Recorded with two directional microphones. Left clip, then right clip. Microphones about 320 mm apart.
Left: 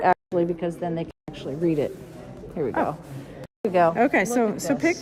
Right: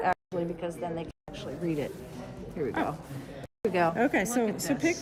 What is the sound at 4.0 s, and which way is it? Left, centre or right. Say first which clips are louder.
Speech: left 6 dB; left.